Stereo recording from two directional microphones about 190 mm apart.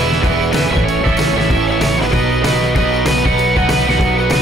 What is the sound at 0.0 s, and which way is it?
Music, centre (ahead or behind).